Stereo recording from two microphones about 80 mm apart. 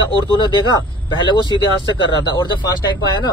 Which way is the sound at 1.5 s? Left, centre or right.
Right.